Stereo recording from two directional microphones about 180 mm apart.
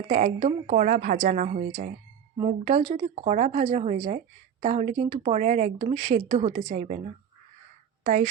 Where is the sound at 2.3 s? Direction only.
30° right (ahead or behind).